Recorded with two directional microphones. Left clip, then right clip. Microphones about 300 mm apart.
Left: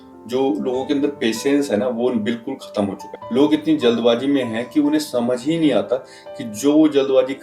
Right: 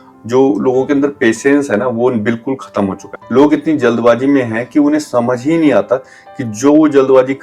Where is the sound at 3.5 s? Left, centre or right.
Right.